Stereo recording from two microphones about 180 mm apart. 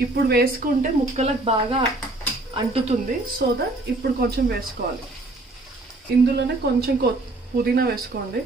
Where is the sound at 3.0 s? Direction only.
60° right (ahead or behind).